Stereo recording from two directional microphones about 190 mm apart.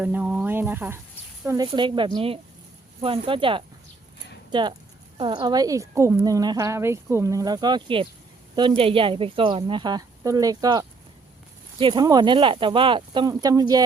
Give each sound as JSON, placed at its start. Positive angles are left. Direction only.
{"t": 0.0, "sound": "a woman's voice", "side_deg": -5}
{"t": 1.5, "sound": "a woman's voice", "side_deg": -20}